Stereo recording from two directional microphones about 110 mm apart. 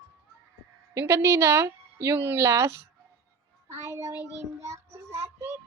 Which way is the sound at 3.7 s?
25° right (ahead or behind).